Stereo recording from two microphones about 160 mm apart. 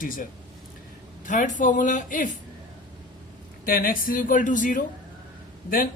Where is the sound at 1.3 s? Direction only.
50° left (ahead or behind).